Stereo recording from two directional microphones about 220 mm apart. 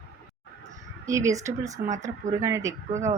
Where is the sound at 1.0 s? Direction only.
15° right (ahead or behind).